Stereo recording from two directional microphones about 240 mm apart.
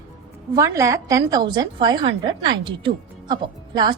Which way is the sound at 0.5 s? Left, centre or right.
Centre.